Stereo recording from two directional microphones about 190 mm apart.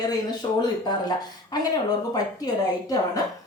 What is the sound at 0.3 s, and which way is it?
A woman's voice, 20° left (ahead or behind).